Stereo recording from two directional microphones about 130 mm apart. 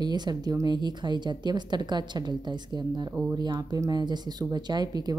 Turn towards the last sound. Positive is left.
turn(degrees=-30)  # may be behind; listen again after turning